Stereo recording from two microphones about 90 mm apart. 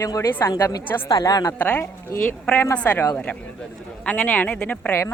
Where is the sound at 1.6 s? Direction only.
15° left (ahead or behind).